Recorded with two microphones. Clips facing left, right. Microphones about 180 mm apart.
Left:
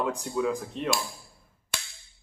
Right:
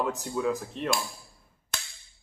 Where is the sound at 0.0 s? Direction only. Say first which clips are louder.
Left 1 dB; centre (ahead or behind).